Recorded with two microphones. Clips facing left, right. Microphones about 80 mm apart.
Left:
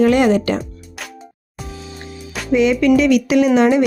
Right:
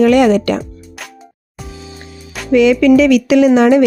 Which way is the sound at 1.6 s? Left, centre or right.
Centre.